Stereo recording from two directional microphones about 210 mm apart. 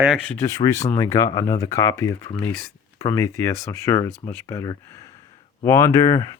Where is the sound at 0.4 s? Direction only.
15° left (ahead or behind).